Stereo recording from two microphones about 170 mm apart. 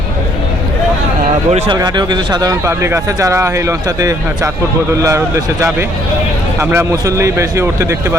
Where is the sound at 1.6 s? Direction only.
25° right (ahead or behind).